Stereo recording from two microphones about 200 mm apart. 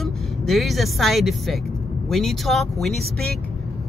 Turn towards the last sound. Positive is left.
turn(degrees=0)  # may be behind; listen again after turning